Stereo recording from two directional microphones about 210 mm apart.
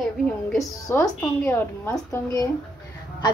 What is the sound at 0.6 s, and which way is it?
A woman's voice, 15° left (ahead or behind).